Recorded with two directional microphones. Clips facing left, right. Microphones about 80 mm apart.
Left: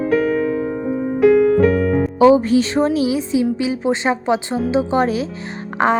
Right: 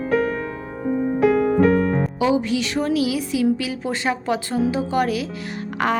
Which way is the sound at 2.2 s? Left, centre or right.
Left.